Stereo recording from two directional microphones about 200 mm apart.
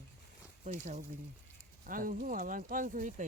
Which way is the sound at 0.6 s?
40° right (ahead or behind).